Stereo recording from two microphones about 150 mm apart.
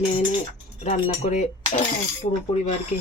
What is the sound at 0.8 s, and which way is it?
Speech, 50° left (ahead or behind).